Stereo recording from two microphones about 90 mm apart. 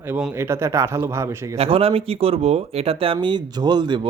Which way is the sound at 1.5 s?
90° right.